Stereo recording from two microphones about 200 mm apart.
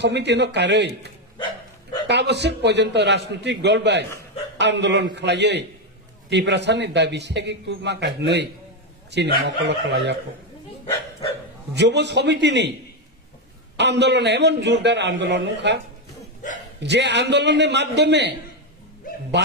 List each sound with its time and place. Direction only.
0.0 s a man's voice: 60° right (ahead or behind)
11.7 s a man's voice: 60° right (ahead or behind)
13.7 s a man's voice: 60° right (ahead or behind)
16.8 s a man's voice: 60° right (ahead or behind)
19.4 s a man's voice: 60° right (ahead or behind)